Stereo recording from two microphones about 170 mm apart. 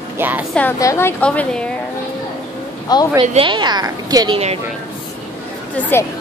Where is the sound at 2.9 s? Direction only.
25° left (ahead or behind).